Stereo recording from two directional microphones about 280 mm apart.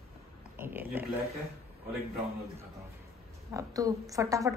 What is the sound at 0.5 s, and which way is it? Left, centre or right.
Speech, centre.